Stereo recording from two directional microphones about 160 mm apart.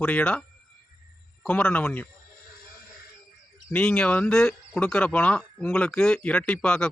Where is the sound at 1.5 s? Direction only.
10° left (ahead or behind).